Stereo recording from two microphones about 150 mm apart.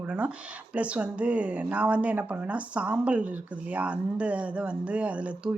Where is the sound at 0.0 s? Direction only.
10° right (ahead or behind).